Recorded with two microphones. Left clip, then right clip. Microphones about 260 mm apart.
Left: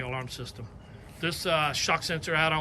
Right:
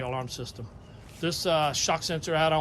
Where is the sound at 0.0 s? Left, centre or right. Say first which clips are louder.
Right 2 dB; centre.